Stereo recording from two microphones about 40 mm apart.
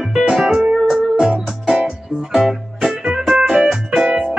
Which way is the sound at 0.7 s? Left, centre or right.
Centre.